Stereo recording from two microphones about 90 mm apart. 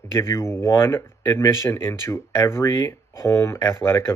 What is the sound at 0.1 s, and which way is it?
Speech, 30° left (ahead or behind).